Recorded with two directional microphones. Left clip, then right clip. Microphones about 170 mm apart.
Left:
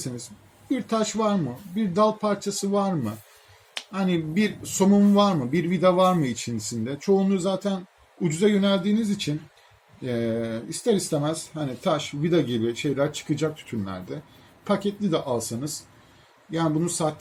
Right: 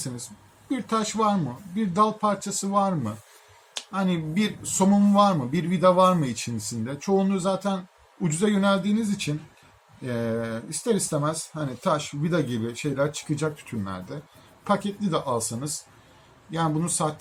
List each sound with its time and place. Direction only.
0.7 s speech: 15° right (ahead or behind)